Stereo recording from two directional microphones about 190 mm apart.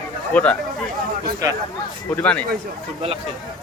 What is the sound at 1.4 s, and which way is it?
Speech, 20° right (ahead or behind).